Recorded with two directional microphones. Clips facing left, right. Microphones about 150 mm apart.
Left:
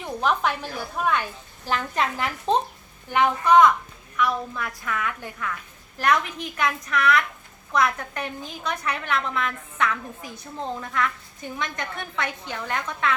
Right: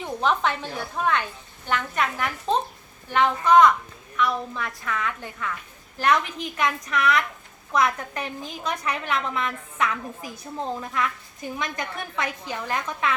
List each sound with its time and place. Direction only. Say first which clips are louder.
0.0 s a woman's voice: even; 5° left (ahead or behind)
1.7 s a woman's voice: even; 30° left (ahead or behind)
3.1 s a woman's voice: even; 10° left (ahead or behind)